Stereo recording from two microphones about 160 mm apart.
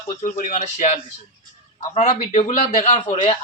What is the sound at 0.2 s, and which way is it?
A man's voice, 50° left (ahead or behind).